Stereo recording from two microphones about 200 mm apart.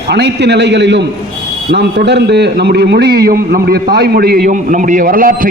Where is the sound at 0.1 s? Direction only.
55° right (ahead or behind).